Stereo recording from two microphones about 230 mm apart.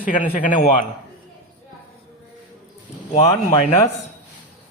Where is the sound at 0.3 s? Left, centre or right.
Left.